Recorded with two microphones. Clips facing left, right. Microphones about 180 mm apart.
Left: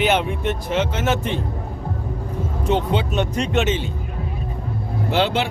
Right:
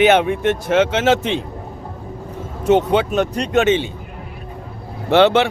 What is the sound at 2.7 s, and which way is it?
Speech, 60° right (ahead or behind).